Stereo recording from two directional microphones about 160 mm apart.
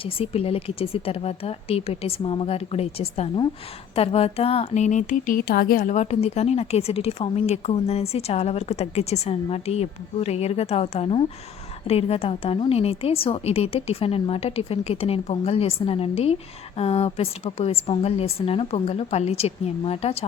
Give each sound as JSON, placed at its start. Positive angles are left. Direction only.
{"t": 0.0, "sound": "a woman's voice", "side_deg": 35}
{"t": 5.9, "sound": "a woman's voice", "side_deg": 45}